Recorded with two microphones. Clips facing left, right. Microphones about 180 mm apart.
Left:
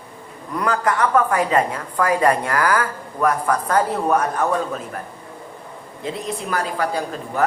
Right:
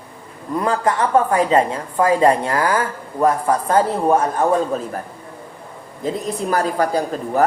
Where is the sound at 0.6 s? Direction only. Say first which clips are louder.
Right 1 dB; 25° right (ahead or behind).